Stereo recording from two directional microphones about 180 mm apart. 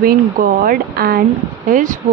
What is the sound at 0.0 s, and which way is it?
Speech, 50° right (ahead or behind).